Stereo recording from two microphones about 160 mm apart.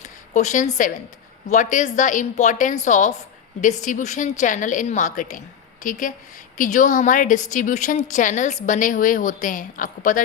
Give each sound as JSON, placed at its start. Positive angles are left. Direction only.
{"t": 0.3, "sound": "a woman's voice", "side_deg": 50}